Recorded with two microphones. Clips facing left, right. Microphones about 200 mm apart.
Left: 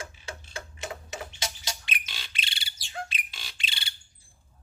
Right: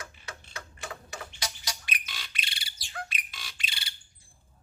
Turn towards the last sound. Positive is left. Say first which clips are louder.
# left 1 dB
turn(degrees=25)  # may be behind; listen again after turning